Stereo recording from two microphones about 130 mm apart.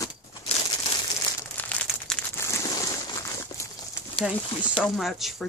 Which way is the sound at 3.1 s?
25° left (ahead or behind).